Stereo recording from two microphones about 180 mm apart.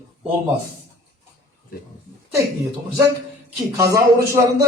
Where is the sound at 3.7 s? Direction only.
20° right (ahead or behind).